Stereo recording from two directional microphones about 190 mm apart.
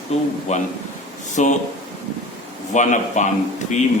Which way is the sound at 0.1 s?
35° left (ahead or behind).